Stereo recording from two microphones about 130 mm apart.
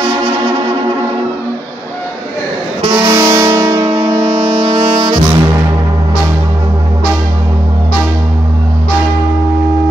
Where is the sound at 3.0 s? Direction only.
25° right (ahead or behind).